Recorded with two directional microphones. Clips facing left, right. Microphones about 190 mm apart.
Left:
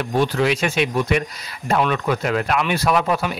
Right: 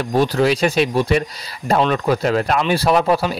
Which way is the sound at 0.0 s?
40° right (ahead or behind).